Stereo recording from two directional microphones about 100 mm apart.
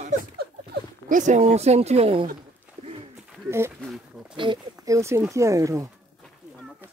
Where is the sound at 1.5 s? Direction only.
90° right.